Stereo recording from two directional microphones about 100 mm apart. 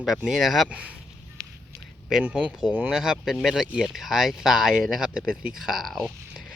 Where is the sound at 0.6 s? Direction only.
10° right (ahead or behind).